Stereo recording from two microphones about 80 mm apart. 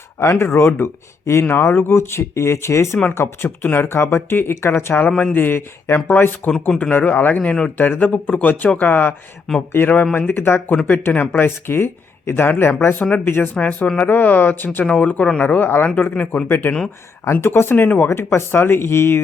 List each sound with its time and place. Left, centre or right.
0.2 s speech: left
6.5 s speech: centre
18.1 s speech: left